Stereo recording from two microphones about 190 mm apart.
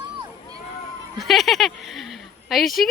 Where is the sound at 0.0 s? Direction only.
20° right (ahead or behind).